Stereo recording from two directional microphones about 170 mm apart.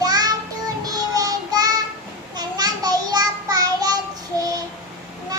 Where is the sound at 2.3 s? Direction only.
25° right (ahead or behind).